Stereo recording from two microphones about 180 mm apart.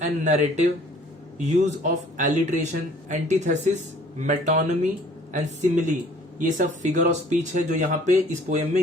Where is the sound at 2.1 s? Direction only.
45° right (ahead or behind).